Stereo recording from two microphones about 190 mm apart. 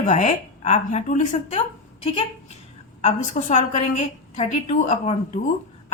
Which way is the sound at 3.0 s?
40° left (ahead or behind).